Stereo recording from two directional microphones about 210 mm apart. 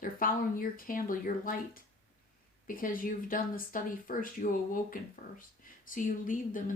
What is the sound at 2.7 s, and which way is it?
Speech, 40° left (ahead or behind).